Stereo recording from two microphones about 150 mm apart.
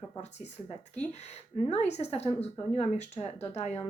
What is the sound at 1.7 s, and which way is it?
A woman's voice, 45° left (ahead or behind).